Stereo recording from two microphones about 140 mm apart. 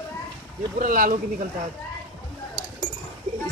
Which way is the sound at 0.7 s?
75° right (ahead or behind).